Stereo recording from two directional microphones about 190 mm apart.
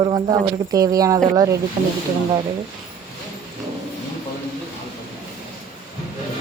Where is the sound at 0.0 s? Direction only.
25° right (ahead or behind).